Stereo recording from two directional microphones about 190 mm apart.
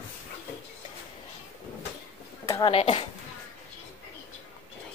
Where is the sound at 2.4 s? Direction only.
15° left (ahead or behind).